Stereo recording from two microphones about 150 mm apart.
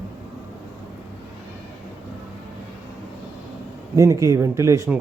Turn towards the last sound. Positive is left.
turn(degrees=-20)  # may be behind; listen again after turning